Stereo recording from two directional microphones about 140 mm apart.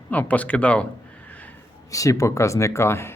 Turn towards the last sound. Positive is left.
turn(degrees=20)  # may be behind; listen again after turning